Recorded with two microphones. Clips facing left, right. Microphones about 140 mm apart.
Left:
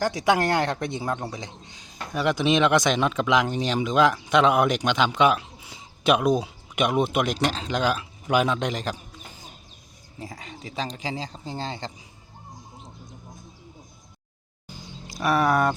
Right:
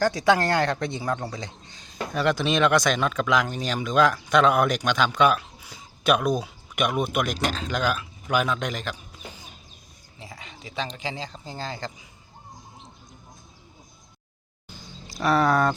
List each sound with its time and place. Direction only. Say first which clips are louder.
0.0 s a man's voice: right 1 dB; 15° left (ahead or behind); by 9.0 s 35° left (ahead or behind)
10.2 s speech: left 5 dB; 40° left (ahead or behind)
15.2 s speech: even; 20° left (ahead or behind)